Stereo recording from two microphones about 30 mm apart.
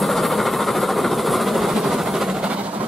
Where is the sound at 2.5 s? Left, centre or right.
Right.